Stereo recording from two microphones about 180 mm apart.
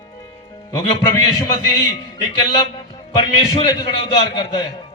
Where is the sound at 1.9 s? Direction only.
20° left (ahead or behind).